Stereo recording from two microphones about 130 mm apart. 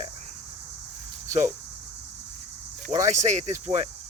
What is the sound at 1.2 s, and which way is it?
Speech, 70° right (ahead or behind).